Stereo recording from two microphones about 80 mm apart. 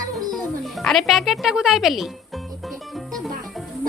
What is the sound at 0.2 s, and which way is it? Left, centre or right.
Music, right.